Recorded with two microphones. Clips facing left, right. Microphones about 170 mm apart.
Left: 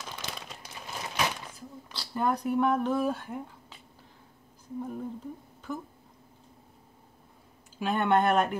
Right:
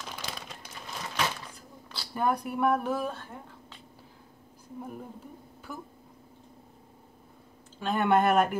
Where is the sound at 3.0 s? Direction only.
15° left (ahead or behind).